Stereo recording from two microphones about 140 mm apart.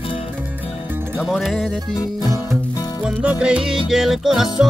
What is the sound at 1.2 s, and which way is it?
Music, centre (ahead or behind).